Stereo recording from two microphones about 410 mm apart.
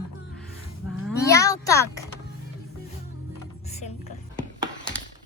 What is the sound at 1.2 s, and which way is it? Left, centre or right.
Speech, centre.